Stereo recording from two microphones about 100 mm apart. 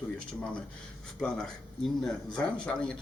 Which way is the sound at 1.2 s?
5° left (ahead or behind).